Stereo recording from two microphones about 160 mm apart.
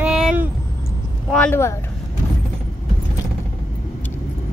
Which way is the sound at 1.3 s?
10° left (ahead or behind).